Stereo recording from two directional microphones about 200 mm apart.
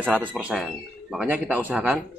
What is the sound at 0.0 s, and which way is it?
A man's voice, 5° right (ahead or behind).